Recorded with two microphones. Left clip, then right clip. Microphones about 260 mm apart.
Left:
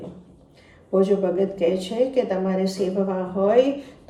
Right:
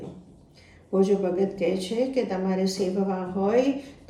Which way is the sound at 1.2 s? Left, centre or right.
Centre.